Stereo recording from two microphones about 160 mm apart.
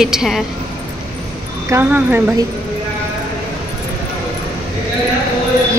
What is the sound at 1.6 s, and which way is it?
Speech, 15° right (ahead or behind).